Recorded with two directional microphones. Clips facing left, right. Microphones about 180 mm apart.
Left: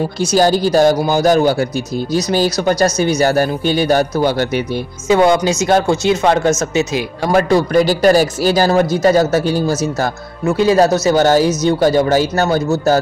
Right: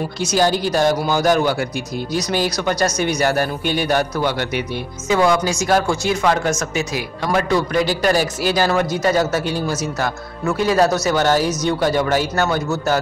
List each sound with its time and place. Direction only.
0.2 s speech: 35° left (ahead or behind)
7.3 s speech: 35° left (ahead or behind)
10.4 s speech: 25° left (ahead or behind)